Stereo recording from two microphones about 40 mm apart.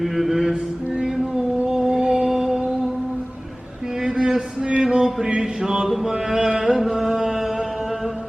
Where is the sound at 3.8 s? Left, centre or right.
Centre.